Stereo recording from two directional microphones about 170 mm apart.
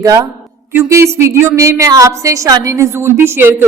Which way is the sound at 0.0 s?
20° right (ahead or behind).